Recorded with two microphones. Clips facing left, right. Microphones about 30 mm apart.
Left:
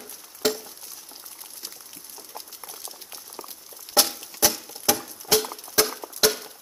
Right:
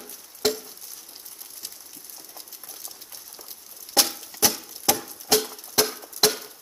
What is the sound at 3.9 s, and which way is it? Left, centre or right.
Music, centre.